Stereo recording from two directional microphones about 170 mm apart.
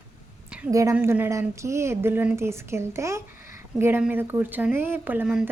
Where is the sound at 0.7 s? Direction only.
20° right (ahead or behind).